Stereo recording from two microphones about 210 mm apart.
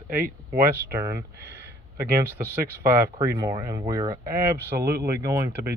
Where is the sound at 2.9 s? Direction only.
10° right (ahead or behind).